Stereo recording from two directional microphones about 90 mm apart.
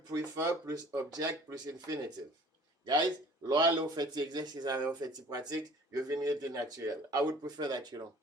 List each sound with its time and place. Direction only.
0.0 s speech: 45° right (ahead or behind)
3.4 s speech: 50° right (ahead or behind)